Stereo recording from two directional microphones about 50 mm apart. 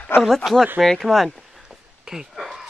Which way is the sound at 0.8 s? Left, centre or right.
Centre.